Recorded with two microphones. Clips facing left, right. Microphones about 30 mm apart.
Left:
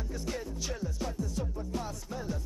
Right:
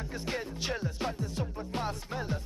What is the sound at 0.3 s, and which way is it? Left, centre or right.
Music, right.